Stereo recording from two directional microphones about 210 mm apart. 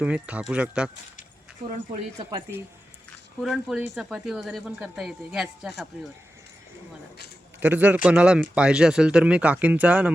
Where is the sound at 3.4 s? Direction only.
Centre (ahead or behind).